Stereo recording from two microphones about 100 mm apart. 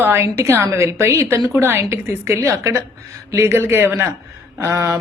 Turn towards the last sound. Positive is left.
turn(degrees=-25)  # may be behind; listen again after turning